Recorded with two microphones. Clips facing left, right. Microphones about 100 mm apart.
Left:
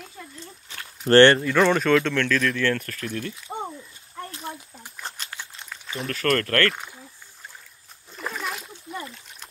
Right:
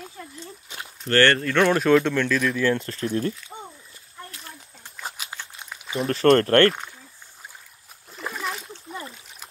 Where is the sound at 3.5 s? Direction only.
60° left (ahead or behind).